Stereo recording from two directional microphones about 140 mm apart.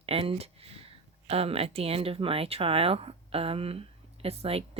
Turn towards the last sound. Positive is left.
turn(degrees=-45)  # may be behind; listen again after turning